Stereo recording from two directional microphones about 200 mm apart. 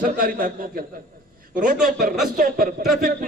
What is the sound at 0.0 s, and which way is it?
A man's voice, 45° right (ahead or behind).